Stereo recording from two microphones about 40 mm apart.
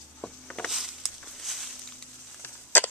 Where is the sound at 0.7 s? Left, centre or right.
Centre.